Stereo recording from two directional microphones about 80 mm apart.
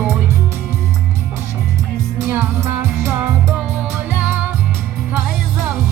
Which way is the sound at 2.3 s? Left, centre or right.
Right.